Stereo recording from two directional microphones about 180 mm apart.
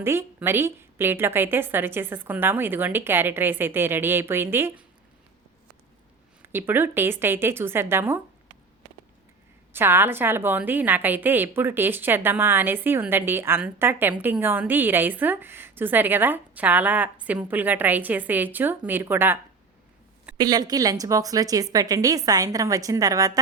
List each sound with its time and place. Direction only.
0.0 s a woman's voice: 15° right (ahead or behind)
6.4 s a woman's voice: 10° right (ahead or behind)
9.7 s a woman's voice: 10° right (ahead or behind)
20.4 s a woman's voice: 20° right (ahead or behind)